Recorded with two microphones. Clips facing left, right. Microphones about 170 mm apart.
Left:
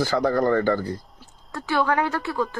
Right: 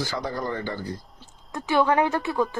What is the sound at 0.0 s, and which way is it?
Speech, 55° left (ahead or behind).